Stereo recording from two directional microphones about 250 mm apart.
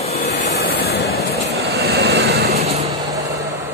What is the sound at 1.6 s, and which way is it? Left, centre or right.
Vehicle, right.